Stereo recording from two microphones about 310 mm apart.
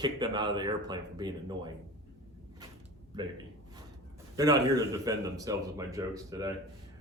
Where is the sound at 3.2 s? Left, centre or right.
Centre.